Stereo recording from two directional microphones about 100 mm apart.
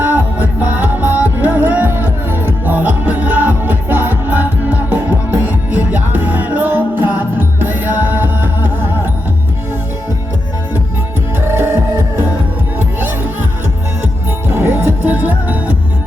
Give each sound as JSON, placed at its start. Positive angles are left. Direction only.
{"t": 0.0, "sound": "music", "side_deg": -15}
{"t": 11.3, "sound": "music", "side_deg": -20}
{"t": 14.5, "sound": "music", "side_deg": -25}